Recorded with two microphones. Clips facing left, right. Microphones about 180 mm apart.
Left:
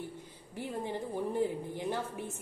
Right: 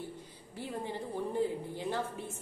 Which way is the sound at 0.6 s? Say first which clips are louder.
Left 2 dB; 15° left (ahead or behind).